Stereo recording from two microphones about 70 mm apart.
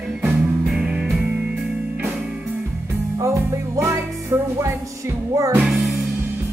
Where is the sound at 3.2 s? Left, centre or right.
Right.